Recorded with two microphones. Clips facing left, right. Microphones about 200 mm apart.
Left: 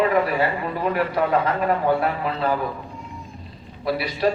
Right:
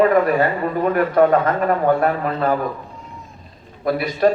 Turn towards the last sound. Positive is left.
turn(degrees=-45)  # may be behind; listen again after turning